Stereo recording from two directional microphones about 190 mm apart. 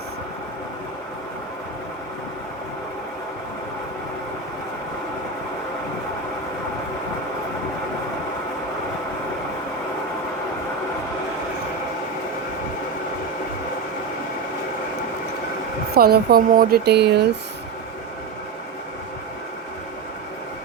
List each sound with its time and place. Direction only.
16.0 s speech: 55° right (ahead or behind)